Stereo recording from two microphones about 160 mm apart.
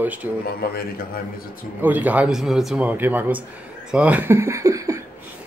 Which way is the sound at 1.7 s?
10° right (ahead or behind).